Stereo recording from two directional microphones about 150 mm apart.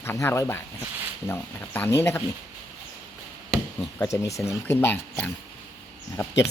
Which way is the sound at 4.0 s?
20° left (ahead or behind).